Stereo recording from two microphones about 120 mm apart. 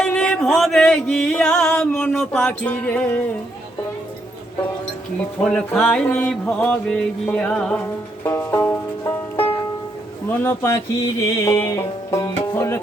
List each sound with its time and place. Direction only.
0.0 s music: 10° left (ahead or behind)
5.4 s mantra: 5° left (ahead or behind)
8.2 s music: 20° left (ahead or behind)
10.2 s mantra: 15° left (ahead or behind)
11.2 s music: 25° left (ahead or behind)